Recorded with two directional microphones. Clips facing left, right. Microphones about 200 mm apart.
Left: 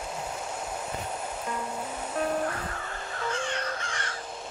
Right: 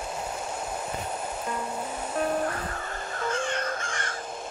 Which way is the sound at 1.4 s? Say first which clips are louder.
Right 1 dB; 30° right (ahead or behind).